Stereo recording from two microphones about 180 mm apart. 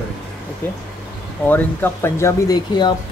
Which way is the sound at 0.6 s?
10° left (ahead or behind).